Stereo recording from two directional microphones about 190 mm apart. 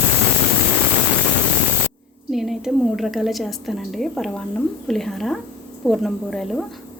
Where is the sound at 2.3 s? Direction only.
Centre (ahead or behind).